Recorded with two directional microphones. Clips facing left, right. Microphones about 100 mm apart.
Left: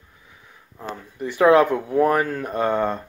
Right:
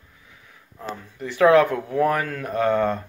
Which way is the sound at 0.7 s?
15° left (ahead or behind).